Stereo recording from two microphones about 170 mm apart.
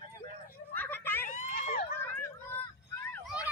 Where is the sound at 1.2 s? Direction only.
45° left (ahead or behind).